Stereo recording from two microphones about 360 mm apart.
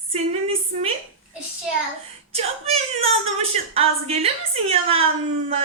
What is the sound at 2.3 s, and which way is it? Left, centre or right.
A woman's voice, centre.